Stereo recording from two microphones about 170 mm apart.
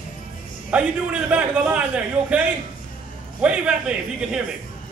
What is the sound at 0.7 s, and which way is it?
A man's voice, 5° right (ahead or behind).